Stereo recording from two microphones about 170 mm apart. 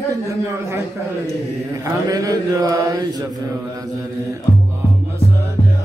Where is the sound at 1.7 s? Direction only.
20° right (ahead or behind).